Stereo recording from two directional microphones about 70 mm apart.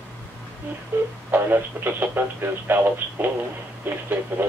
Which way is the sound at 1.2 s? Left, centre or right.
Right.